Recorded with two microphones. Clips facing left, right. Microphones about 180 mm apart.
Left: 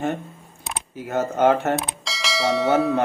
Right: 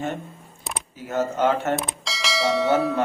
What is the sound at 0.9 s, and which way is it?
Speech, 60° left (ahead or behind).